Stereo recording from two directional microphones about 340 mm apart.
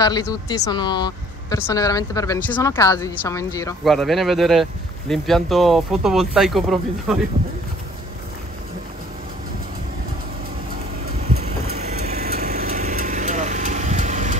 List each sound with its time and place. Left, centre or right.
0.0 s speech: centre
11.2 s vehicle: centre